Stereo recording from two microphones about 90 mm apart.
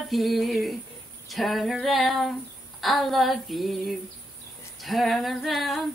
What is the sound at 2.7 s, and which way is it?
Female singing, centre (ahead or behind).